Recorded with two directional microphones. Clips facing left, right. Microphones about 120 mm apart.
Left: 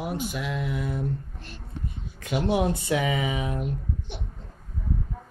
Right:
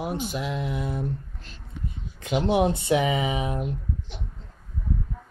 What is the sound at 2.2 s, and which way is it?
Speech, 20° right (ahead or behind).